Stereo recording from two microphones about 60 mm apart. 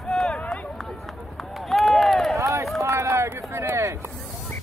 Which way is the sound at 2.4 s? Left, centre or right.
Right.